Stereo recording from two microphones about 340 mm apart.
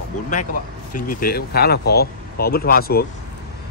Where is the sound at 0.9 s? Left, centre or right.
Left.